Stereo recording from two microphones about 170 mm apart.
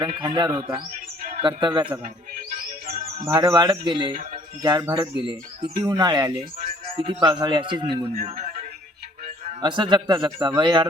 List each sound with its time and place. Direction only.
0.0 s a man's voice: 30° right (ahead or behind)
2.8 s music: 60° right (ahead or behind)
3.2 s a man's voice: 20° right (ahead or behind)
8.2 s music: 35° right (ahead or behind)
9.6 s a man's voice: 25° right (ahead or behind)